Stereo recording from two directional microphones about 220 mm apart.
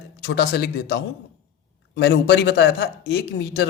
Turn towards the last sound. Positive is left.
turn(degrees=50)  # may be behind; listen again after turning